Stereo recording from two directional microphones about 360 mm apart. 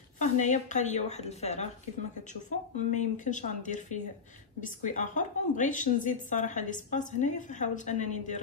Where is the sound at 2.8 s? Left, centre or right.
Centre.